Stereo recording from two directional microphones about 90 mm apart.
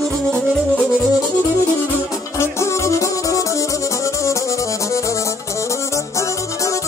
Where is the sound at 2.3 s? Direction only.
30° left (ahead or behind).